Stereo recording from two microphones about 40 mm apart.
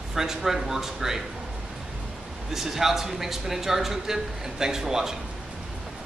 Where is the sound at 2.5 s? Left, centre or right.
Centre.